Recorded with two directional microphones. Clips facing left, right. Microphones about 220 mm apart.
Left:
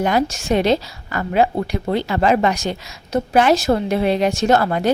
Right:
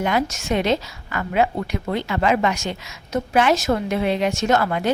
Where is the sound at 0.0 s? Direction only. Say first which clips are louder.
Left 3 dB; 35° left (ahead or behind).